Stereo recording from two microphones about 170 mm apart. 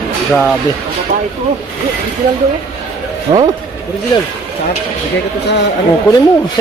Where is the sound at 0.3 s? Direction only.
Centre (ahead or behind).